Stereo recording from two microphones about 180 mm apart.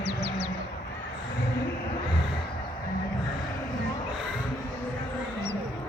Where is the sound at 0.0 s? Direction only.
70° right (ahead or behind).